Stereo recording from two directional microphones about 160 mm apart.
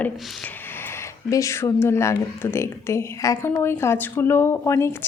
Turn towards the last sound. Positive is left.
turn(degrees=15)  # may be behind; listen again after turning